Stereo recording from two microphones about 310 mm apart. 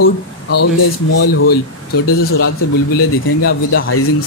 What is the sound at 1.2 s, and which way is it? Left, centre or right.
Speech, left.